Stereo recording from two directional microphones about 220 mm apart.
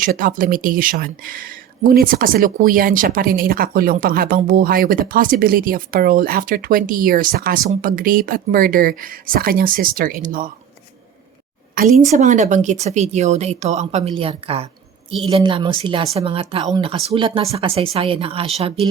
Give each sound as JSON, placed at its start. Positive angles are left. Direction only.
{"t": 0.0, "sound": "speech", "side_deg": -40}
{"t": 11.7, "sound": "a woman's voice", "side_deg": -40}